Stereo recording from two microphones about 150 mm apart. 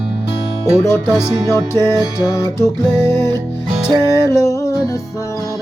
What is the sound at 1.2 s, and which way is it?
Music, 25° right (ahead or behind).